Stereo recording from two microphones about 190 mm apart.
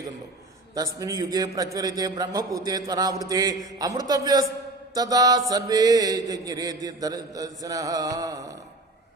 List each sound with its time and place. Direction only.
0.7 s music: 20° right (ahead or behind)